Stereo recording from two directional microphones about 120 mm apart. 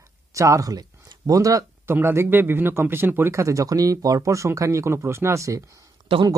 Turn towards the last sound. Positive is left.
turn(degrees=-50)  # may be behind; listen again after turning